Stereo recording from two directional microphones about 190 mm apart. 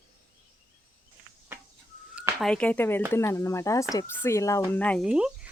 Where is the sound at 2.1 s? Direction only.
15° right (ahead or behind).